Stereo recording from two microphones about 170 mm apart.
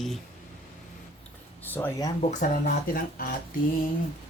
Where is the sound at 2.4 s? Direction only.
50° left (ahead or behind).